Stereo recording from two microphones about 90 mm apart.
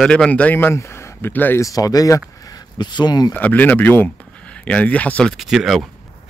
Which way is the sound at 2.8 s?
55° left (ahead or behind).